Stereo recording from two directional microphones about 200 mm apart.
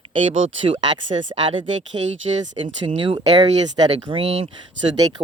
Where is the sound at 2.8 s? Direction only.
25° right (ahead or behind).